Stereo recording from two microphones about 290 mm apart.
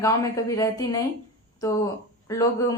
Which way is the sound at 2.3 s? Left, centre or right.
Centre.